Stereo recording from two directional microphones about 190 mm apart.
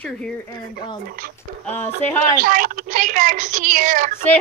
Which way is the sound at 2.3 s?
45° right (ahead or behind).